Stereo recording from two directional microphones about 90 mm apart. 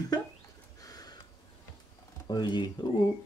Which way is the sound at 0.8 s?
45° left (ahead or behind).